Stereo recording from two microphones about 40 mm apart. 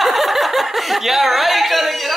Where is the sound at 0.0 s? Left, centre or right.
Centre.